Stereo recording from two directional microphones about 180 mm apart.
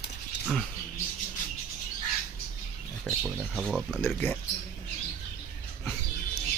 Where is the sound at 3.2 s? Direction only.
Centre (ahead or behind).